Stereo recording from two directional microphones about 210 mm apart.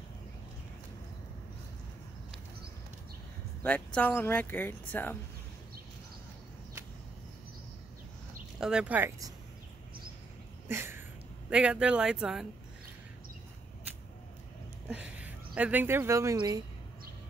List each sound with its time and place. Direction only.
3.6 s speech: 5° left (ahead or behind)
8.5 s speech: 5° right (ahead or behind)
10.7 s a sound: 10° right (ahead or behind)
11.5 s speech: 5° right (ahead or behind)
14.9 s speech: 5° right (ahead or behind)